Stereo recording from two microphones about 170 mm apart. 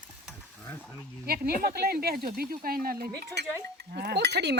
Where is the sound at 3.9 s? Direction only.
75° right (ahead or behind).